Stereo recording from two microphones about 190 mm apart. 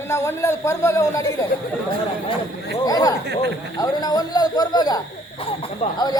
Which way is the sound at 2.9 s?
20° left (ahead or behind).